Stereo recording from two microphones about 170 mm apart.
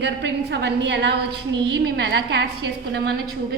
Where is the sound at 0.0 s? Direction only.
85° right.